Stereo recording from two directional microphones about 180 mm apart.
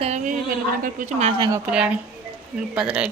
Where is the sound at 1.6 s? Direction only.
5° right (ahead or behind).